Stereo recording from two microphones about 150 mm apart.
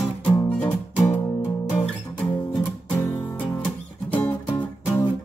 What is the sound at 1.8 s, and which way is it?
Music, 10° left (ahead or behind).